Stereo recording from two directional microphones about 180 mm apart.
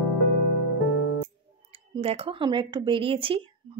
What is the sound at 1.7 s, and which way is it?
Speech, 30° right (ahead or behind).